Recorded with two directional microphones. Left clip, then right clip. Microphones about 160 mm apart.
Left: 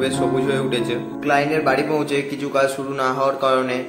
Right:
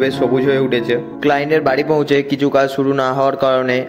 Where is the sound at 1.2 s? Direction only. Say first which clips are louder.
Right 3 dB; 55° right (ahead or behind).